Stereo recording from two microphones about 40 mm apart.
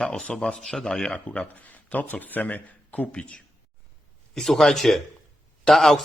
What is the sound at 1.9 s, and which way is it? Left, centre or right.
Speech, left.